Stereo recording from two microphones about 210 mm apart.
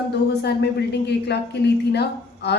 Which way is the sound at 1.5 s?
50° left (ahead or behind).